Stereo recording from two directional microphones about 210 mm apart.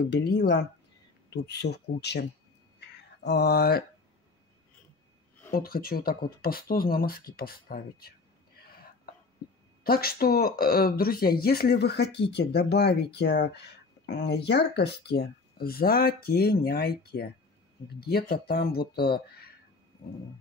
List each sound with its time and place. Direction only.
0.1 s speech: 50° left (ahead or behind)
3.3 s speech: 50° left (ahead or behind)
5.5 s speech: 45° left (ahead or behind)
9.8 s speech: 45° left (ahead or behind)
18.3 s speech: 45° left (ahead or behind)